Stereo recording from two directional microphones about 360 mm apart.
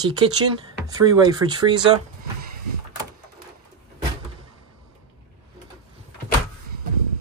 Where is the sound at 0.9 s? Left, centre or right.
Centre.